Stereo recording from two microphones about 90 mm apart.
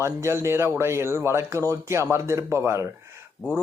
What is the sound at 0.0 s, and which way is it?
Speech, 30° right (ahead or behind).